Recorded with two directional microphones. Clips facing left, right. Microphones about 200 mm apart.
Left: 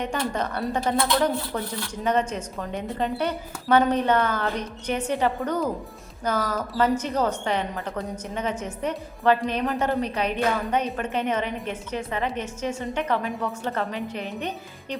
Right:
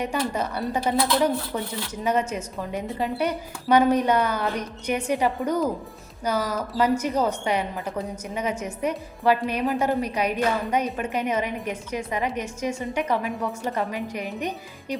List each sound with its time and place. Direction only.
0.0 s a woman's voice: 10° right (ahead or behind)